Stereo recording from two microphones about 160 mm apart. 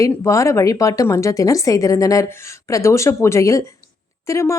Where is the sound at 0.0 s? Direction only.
15° left (ahead or behind).